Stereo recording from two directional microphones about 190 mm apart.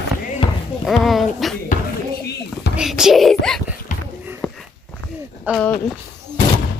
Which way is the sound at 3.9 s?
40° left (ahead or behind).